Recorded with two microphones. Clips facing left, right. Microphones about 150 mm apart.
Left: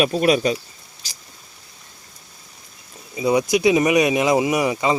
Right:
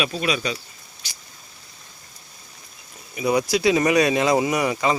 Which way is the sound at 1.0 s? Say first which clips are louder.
Even; 40° left (ahead or behind).